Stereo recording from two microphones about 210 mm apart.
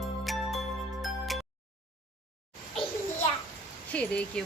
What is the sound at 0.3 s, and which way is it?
Music, centre (ahead or behind).